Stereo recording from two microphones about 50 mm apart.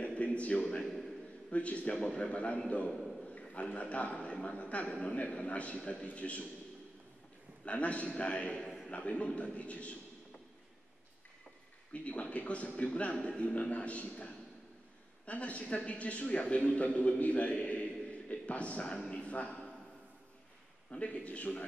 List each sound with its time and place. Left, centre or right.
0.0 s a sound: left
0.8 s a sound: centre
1.5 s a man's voice: left
2.9 s a man's voice: centre
3.3 s a man's voice: left
7.6 s a man's voice: left
11.9 s a man's voice: left
18.9 s a sound: centre
19.3 s a man's voice: left
20.9 s a man's voice: left